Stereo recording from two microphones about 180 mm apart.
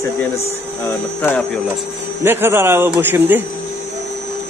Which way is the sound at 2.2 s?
10° right (ahead or behind).